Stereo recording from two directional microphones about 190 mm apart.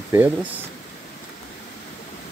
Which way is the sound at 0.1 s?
10° right (ahead or behind).